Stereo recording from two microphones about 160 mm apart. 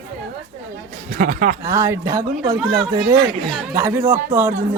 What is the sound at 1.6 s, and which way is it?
Speech, 20° right (ahead or behind).